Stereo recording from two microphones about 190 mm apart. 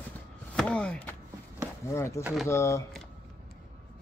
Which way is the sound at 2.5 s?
15° left (ahead or behind).